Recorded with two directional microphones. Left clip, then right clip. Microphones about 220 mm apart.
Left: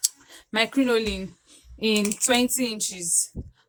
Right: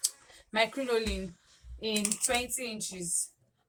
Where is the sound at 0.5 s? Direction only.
40° left (ahead or behind).